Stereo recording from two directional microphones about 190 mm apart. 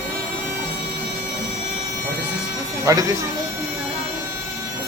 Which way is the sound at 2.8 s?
15° right (ahead or behind).